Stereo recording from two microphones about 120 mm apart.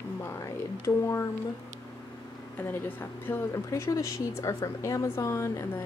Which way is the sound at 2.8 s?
20° left (ahead or behind).